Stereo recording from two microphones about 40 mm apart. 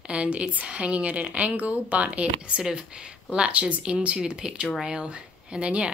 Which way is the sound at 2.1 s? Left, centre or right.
Right.